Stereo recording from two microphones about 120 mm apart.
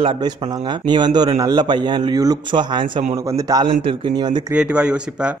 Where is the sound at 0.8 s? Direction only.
35° right (ahead or behind).